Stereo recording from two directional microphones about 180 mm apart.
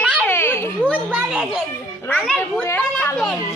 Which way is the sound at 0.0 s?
5° left (ahead or behind).